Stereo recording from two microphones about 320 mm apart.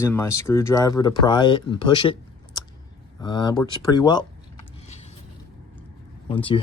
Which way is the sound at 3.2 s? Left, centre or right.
Centre.